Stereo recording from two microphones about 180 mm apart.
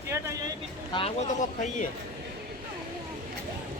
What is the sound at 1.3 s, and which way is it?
Speech, 45° left (ahead or behind).